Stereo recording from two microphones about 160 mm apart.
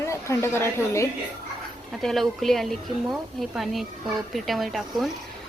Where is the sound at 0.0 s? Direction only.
15° left (ahead or behind).